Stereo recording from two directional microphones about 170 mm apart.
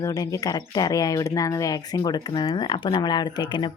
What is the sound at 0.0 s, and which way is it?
Speech, 20° left (ahead or behind).